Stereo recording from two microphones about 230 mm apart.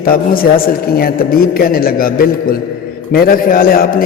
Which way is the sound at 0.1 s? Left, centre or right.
Left.